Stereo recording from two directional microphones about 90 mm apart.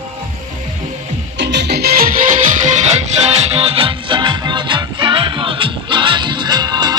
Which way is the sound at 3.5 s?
90° right.